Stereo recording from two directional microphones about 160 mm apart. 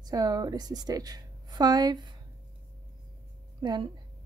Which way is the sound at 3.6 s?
25° right (ahead or behind).